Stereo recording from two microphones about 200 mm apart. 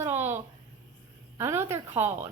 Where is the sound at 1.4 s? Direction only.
15° right (ahead or behind).